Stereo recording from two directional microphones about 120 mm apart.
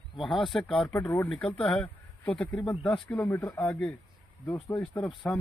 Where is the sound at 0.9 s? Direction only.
20° left (ahead or behind).